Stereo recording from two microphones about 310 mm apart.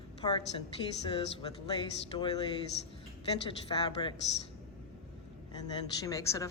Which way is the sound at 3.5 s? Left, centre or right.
Centre.